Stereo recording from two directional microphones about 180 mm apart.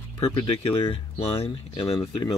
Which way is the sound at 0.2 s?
30° left (ahead or behind).